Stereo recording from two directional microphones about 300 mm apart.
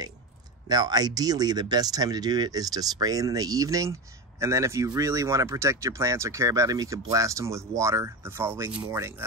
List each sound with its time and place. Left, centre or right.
0.7 s speech: centre